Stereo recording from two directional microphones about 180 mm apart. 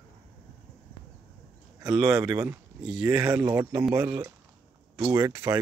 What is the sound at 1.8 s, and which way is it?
Speech, 5° right (ahead or behind).